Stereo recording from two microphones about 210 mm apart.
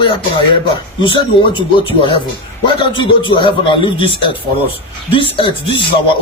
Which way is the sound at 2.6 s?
20° left (ahead or behind).